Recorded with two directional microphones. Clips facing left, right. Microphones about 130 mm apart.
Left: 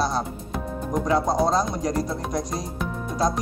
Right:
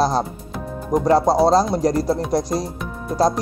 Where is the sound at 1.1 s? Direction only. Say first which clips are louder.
Right 7 dB; 35° right (ahead or behind).